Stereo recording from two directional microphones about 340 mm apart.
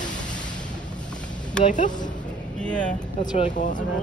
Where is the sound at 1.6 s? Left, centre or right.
Left.